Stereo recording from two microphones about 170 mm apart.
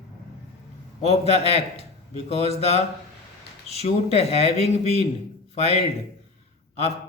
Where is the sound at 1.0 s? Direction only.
40° left (ahead or behind).